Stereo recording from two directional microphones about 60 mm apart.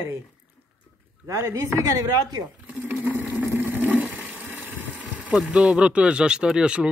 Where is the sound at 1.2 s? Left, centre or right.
Right.